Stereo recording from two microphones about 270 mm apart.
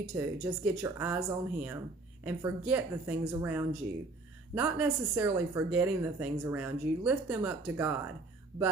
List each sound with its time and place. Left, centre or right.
0.1 s speech: centre